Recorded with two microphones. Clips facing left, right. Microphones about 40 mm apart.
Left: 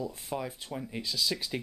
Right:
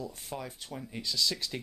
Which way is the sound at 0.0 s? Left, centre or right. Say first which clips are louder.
Left 4 dB; centre.